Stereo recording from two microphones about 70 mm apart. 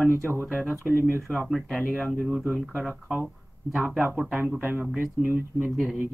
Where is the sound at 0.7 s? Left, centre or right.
Right.